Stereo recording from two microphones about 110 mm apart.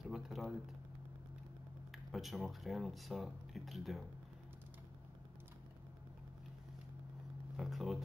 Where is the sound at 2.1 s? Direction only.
Centre (ahead or behind).